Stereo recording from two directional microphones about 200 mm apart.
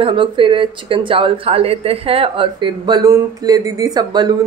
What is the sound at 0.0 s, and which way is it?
Speech, 25° right (ahead or behind).